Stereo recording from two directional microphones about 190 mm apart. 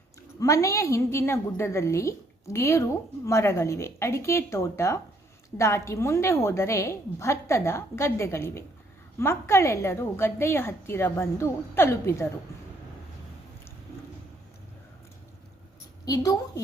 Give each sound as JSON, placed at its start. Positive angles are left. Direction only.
{"t": 0.3, "sound": "a woman's voice", "side_deg": 15}
{"t": 16.0, "sound": "a woman's voice", "side_deg": 20}